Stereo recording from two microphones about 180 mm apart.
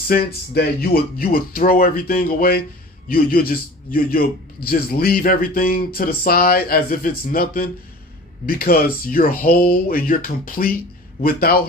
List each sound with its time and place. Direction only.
0.1 s a man's voice: 60° left (ahead or behind)